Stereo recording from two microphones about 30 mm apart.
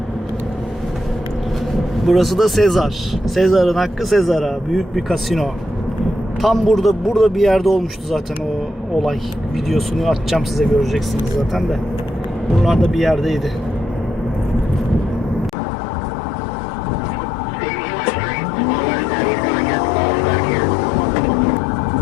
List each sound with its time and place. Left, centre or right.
2.0 s a man's voice: centre
9.6 s a man's voice: centre
12.8 s a man's voice: centre